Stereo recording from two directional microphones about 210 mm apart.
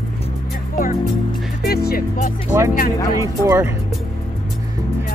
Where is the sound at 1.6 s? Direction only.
50° left (ahead or behind).